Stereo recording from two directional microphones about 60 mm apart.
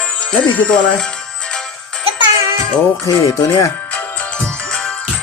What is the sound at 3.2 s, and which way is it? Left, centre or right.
Speech, left.